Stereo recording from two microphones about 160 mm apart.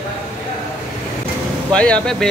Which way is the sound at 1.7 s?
5° left (ahead or behind).